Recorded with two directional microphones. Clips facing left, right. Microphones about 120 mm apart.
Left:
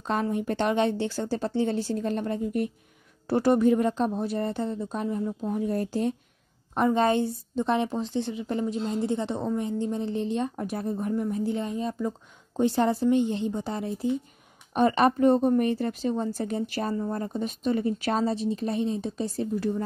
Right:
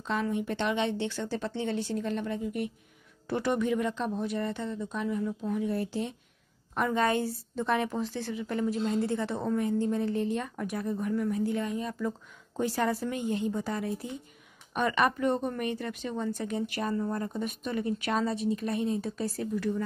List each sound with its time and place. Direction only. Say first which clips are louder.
0.0 s a woman's voice: left 3 dB; 45° left (ahead or behind)
6.7 s a woman's voice: left 5 dB; 30° left (ahead or behind)